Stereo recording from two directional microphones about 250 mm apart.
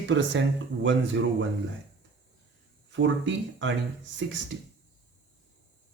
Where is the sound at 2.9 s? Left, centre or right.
Right.